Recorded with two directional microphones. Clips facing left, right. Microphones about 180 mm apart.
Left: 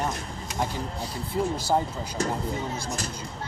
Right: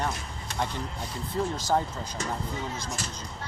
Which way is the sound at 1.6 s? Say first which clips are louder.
Even; 10° left (ahead or behind).